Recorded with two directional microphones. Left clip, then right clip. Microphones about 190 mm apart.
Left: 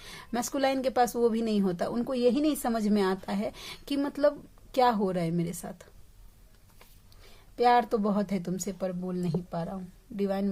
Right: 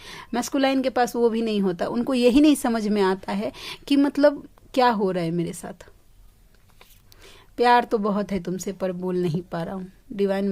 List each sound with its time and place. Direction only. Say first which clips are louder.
0.0 s a woman's voice: right 5 dB; 25° right (ahead or behind)
2.1 s a woman's voice: right 9 dB; 35° right (ahead or behind)
7.2 s a woman's voice: right 5 dB; 35° right (ahead or behind)